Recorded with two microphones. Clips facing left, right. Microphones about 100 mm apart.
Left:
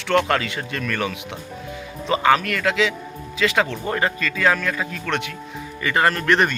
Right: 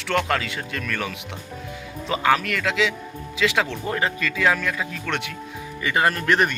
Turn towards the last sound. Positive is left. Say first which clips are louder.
# left 2 dB
turn(degrees=-10)  # may be behind; listen again after turning